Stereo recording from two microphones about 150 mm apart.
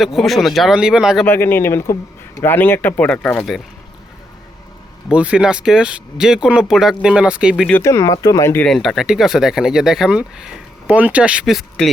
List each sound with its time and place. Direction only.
0.0 s speech: centre (ahead or behind)
1.2 s speech: 15° left (ahead or behind)
5.0 s speech: 10° right (ahead or behind)
7.7 s speech: 20° left (ahead or behind)
8.6 s speech: centre (ahead or behind)